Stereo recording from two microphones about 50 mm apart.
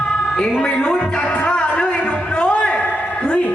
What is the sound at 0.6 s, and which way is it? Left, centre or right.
Music, centre.